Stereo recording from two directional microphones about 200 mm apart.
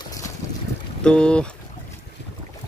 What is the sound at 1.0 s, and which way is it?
Speech, 5° left (ahead or behind).